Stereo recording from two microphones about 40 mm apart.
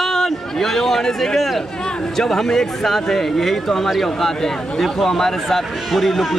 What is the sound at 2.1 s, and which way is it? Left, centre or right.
Speech, centre.